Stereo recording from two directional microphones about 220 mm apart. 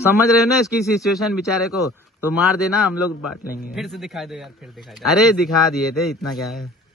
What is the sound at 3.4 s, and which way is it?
Speech, 40° left (ahead or behind).